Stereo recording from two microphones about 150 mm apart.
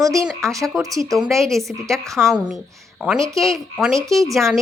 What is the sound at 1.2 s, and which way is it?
A woman's voice, centre (ahead or behind).